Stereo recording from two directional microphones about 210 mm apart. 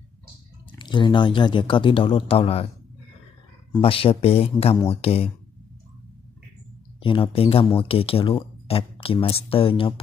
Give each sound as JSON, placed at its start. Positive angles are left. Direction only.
{"t": 0.7, "sound": "speech", "side_deg": 20}
{"t": 3.7, "sound": "speech", "side_deg": 25}
{"t": 7.0, "sound": "speech", "side_deg": 25}